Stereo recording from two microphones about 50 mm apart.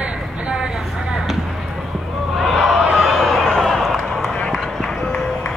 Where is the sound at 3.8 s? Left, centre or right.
Centre.